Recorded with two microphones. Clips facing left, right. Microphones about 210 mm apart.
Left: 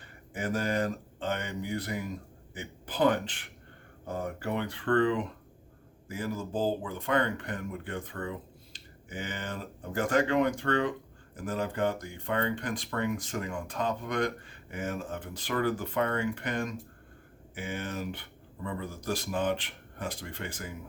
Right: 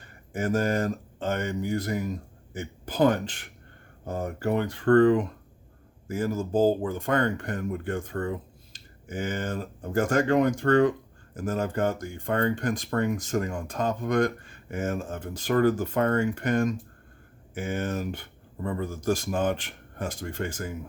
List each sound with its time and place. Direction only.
0.0 s speech: 45° right (ahead or behind)